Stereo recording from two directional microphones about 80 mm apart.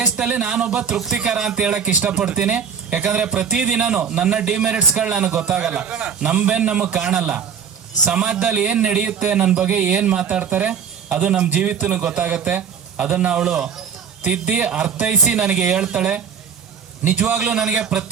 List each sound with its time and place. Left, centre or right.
0.2 s speech: centre